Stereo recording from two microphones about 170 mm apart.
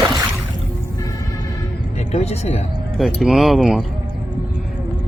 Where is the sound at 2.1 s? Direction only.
40° left (ahead or behind).